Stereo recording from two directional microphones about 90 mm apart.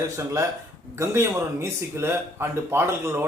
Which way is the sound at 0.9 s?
30° right (ahead or behind).